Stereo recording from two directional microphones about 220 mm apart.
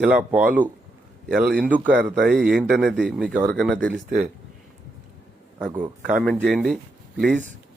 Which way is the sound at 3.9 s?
40° right (ahead or behind).